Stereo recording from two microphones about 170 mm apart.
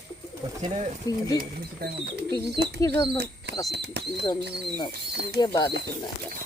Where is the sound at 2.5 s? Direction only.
75° right (ahead or behind).